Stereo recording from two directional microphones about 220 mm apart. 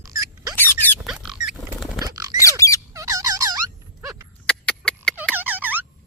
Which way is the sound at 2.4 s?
15° left (ahead or behind).